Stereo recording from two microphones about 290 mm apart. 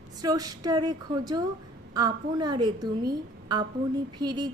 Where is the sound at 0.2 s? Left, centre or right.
Centre.